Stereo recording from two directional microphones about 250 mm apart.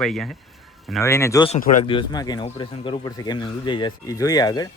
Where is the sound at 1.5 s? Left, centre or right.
Left.